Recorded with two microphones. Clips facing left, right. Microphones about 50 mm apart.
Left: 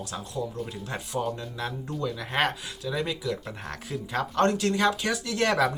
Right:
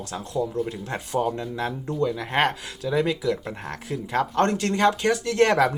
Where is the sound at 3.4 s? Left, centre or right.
Right.